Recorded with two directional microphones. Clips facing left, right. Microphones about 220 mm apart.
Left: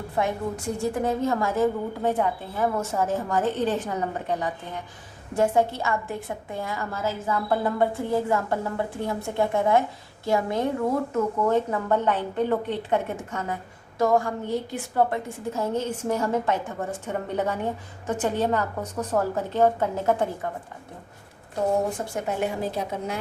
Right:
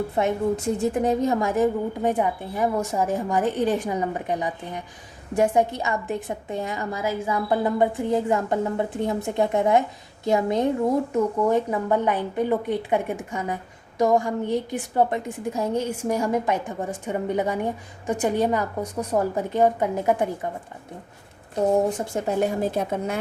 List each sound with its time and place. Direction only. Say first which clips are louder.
0.2 s a woman's voice: right 3 dB; 20° right (ahead or behind)
22.4 s a woman's voice: right 6 dB; 45° right (ahead or behind)